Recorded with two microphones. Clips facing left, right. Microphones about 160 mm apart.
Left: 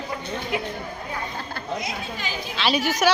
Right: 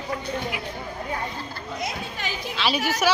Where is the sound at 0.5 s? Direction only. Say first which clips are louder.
Left 6 dB; 25° left (ahead or behind).